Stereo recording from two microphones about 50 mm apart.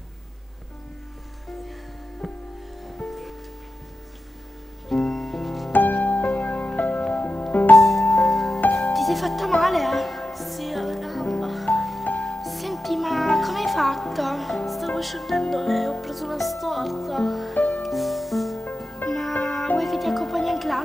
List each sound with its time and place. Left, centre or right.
2.2 s music: centre
4.8 s music: centre
5.7 s music: left
7.7 s music: centre
17.6 s music: left
17.8 s music: centre